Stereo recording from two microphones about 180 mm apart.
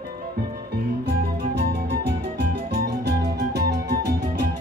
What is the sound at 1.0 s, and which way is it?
Music, 65° right (ahead or behind).